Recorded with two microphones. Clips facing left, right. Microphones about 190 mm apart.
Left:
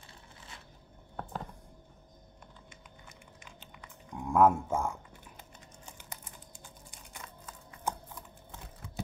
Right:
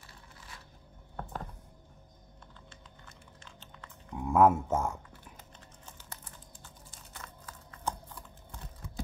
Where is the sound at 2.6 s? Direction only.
15° left (ahead or behind).